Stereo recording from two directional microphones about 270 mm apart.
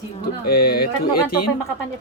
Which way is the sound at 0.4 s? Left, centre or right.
Left.